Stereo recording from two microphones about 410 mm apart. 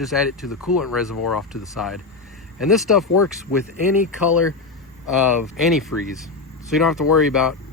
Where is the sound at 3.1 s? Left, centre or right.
Left.